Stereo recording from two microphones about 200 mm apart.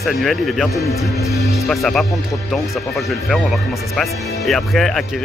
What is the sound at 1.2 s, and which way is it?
Speech, 15° left (ahead or behind).